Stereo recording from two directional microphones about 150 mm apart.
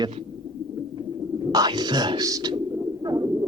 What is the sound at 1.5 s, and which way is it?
Speech, 25° right (ahead or behind).